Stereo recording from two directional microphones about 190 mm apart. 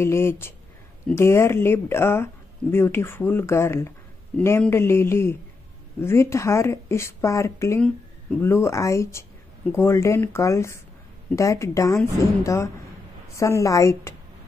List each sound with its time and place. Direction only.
0.0 s speech: 15° left (ahead or behind)